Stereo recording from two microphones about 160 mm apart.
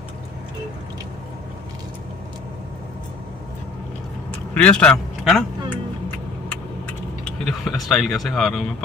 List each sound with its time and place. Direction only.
4.6 s a man's voice: 5° left (ahead or behind)
7.2 s speech: centre (ahead or behind)